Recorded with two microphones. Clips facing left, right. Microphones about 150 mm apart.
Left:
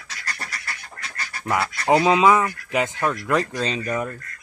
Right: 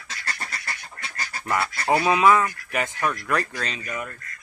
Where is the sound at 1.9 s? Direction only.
20° left (ahead or behind).